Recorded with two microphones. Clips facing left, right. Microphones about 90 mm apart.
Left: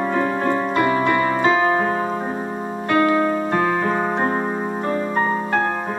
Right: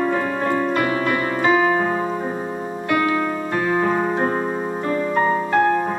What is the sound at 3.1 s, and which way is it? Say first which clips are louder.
Music: left 3 dB; 25° left (ahead or behind).